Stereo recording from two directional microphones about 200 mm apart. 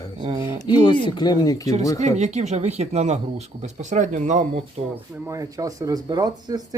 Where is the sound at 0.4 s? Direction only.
10° right (ahead or behind).